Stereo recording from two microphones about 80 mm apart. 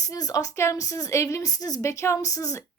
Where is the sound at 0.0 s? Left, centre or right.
Left.